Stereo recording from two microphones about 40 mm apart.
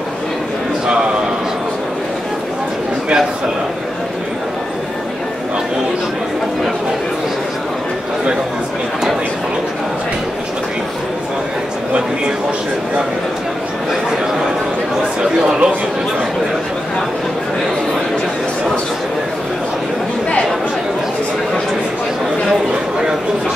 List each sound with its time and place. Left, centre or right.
15.4 s chatter: centre